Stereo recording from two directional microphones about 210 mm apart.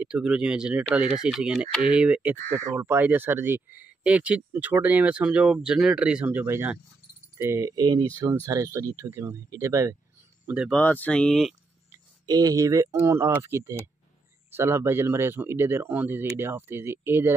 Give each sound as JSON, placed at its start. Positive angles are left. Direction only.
{"t": 0.0, "sound": "speech", "side_deg": -5}
{"t": 10.8, "sound": "speech", "side_deg": 10}
{"t": 11.9, "sound": "speech", "side_deg": -15}